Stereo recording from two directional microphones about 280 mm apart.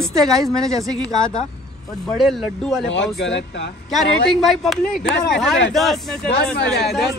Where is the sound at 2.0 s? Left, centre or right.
Centre.